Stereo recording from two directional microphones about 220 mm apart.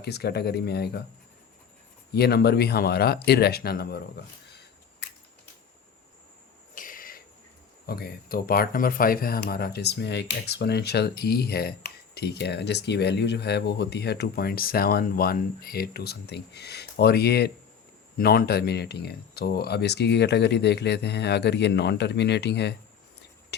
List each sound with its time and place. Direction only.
0.0 s speech: 45° left (ahead or behind)
2.1 s speech: 45° left (ahead or behind)
6.7 s owl: 40° left (ahead or behind)
7.9 s speech: 45° left (ahead or behind)